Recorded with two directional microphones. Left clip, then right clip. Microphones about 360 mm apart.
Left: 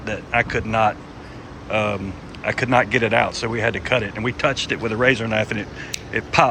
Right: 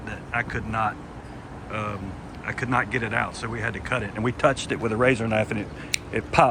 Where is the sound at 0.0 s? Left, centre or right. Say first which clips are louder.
Left 8 dB; centre.